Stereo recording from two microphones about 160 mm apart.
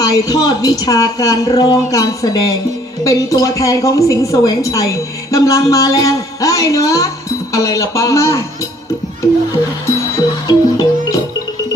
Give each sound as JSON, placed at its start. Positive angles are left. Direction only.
{"t": 0.0, "sound": "a woman's voice", "side_deg": 20}
{"t": 10.4, "sound": "music", "side_deg": 25}